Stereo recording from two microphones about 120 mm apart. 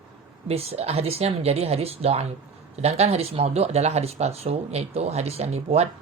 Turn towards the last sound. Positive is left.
turn(degrees=-60)  # may be behind; listen again after turning